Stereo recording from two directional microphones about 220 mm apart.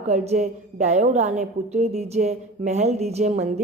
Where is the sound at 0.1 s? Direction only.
30° right (ahead or behind).